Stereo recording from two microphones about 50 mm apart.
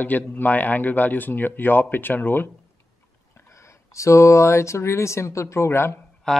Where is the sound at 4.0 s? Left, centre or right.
Left.